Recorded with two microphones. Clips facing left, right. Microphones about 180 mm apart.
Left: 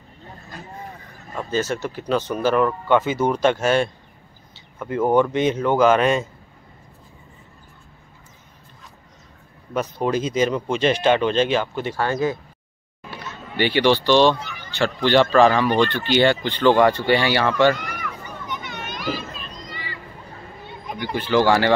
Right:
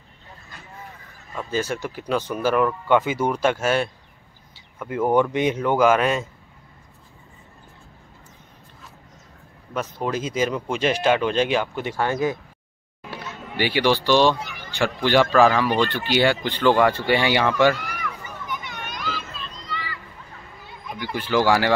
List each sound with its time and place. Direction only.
1.5 s speech: 10° right (ahead or behind)
9.8 s speech: centre (ahead or behind); by 12.4 s 15° right (ahead or behind)
13.6 s speech: 10° right (ahead or behind)
16.8 s a sound: 10° right (ahead or behind)
18.9 s children playing: 15° left (ahead or behind)
20.6 s a sound: 20° left (ahead or behind)
21.2 s speech: 10° right (ahead or behind)